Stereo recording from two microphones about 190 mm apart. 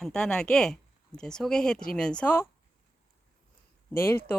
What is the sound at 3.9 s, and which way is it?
Speech, 10° left (ahead or behind).